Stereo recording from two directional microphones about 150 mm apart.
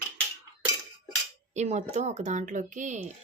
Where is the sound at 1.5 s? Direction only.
50° right (ahead or behind).